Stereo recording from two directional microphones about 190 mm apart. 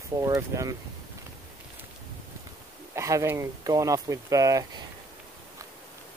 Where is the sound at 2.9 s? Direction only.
15° right (ahead or behind).